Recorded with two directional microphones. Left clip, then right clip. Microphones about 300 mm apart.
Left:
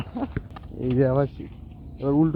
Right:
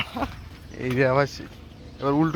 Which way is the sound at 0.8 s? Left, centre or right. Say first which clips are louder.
Right 1 dB; right.